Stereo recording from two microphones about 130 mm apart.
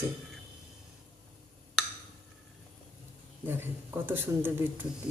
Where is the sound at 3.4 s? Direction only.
15° right (ahead or behind).